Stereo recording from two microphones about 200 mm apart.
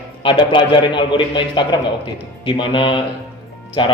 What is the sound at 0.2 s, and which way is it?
A man's voice, 25° left (ahead or behind).